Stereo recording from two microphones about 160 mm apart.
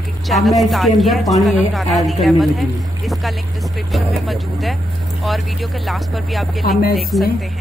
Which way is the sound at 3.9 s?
Centre (ahead or behind).